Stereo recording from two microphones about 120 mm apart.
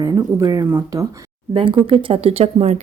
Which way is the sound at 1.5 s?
50° right (ahead or behind).